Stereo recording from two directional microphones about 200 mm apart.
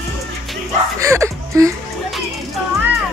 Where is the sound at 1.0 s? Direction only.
15° right (ahead or behind).